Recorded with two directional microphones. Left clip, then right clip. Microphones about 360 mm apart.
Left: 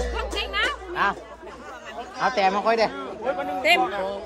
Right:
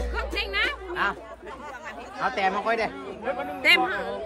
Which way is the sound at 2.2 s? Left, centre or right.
Centre.